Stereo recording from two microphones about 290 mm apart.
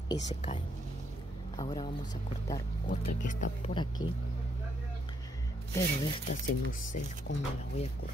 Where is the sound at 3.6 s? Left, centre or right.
Centre.